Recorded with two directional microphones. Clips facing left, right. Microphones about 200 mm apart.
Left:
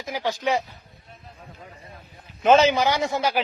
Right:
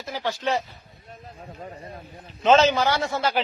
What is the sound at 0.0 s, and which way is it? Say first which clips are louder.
Speech: left 2 dB; 15° left (ahead or behind).